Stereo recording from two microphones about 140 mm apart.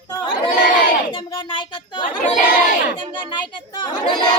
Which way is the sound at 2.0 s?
75° left (ahead or behind).